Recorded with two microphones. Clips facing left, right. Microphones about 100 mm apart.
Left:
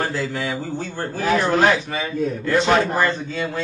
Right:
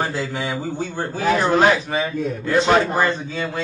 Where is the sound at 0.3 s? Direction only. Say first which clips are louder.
Even; 20° right (ahead or behind).